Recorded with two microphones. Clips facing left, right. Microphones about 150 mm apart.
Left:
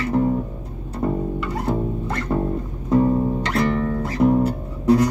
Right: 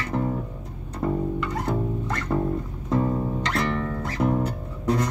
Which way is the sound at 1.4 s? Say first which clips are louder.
Left 3 dB; 5° left (ahead or behind).